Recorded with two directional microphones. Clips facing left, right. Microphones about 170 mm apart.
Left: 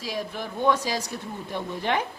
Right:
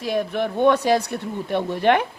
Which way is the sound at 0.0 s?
60° right (ahead or behind).